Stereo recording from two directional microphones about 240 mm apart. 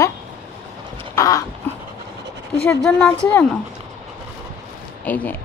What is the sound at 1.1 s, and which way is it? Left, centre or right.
Dog, centre.